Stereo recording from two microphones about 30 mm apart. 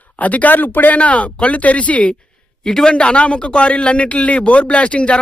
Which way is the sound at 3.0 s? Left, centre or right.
Left.